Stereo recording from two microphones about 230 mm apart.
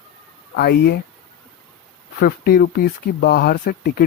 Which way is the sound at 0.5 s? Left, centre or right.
Left.